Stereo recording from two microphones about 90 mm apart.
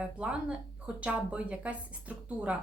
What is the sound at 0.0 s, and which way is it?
Speech, 15° right (ahead or behind).